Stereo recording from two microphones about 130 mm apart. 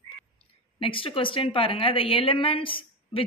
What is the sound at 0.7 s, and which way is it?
A woman's voice, 45° left (ahead or behind).